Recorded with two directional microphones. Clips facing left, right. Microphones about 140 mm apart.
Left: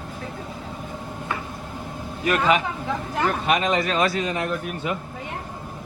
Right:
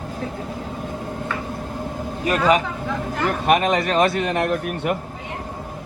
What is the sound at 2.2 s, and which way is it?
Speech, 40° right (ahead or behind).